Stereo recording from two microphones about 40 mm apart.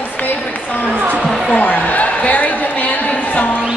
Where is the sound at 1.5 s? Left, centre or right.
Left.